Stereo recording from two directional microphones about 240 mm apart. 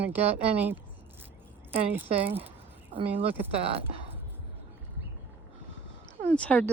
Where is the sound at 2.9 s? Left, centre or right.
Right.